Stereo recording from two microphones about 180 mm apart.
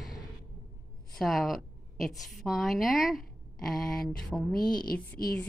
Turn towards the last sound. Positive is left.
turn(degrees=55)  # may be behind; listen again after turning